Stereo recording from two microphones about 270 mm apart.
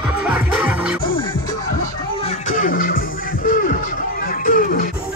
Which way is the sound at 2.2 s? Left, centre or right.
Left.